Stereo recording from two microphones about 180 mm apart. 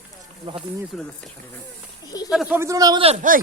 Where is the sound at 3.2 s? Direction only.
45° right (ahead or behind).